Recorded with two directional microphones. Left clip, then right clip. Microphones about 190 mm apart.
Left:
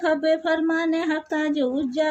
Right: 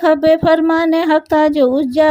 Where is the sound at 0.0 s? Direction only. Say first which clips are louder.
Right 10 dB; 50° right (ahead or behind).